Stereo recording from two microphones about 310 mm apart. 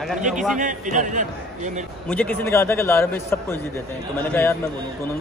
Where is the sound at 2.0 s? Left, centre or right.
Centre.